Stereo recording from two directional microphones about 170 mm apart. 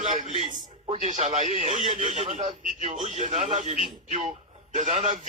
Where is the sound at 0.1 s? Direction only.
45° right (ahead or behind).